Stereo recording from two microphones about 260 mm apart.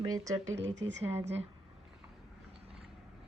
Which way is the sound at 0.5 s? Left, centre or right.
Right.